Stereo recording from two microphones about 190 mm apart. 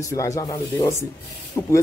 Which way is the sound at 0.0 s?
15° left (ahead or behind).